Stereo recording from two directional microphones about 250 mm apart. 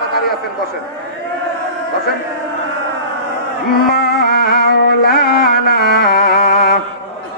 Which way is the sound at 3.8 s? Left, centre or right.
Left.